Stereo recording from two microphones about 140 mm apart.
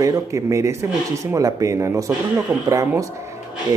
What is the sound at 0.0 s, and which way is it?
Speech, 20° right (ahead or behind).